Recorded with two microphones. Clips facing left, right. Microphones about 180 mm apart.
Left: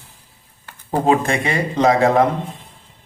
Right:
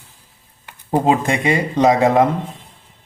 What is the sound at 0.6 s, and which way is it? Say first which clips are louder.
Speech: right 1 dB; 20° right (ahead or behind).